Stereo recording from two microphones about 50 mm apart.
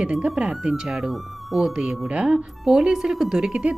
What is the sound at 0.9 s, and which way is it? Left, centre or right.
Speech, centre.